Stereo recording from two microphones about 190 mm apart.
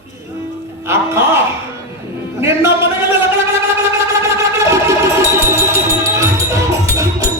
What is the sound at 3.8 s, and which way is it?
Wind instrument, 15° right (ahead or behind).